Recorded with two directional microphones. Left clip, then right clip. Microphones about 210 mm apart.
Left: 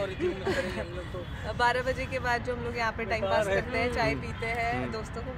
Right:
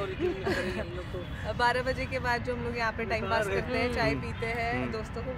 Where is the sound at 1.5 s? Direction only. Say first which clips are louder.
Left 1 dB; 5° right (ahead or behind).